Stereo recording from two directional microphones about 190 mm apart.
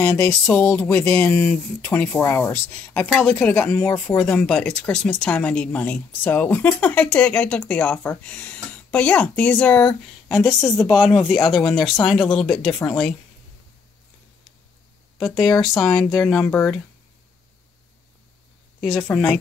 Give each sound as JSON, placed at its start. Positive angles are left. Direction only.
{"t": 0.0, "sound": "speech", "side_deg": 15}
{"t": 11.0, "sound": "speech", "side_deg": 0}
{"t": 15.6, "sound": "speech", "side_deg": 0}
{"t": 18.8, "sound": "speech", "side_deg": 0}